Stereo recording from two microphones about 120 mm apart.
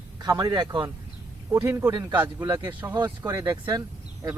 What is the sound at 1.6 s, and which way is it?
Speech, 20° right (ahead or behind).